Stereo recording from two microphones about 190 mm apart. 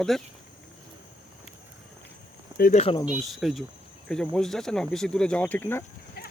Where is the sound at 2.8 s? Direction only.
30° left (ahead or behind).